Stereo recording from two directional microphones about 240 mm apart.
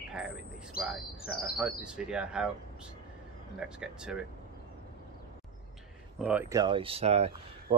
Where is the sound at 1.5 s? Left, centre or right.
Centre.